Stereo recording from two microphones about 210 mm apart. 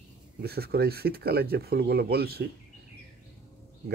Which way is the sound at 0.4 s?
50° right (ahead or behind).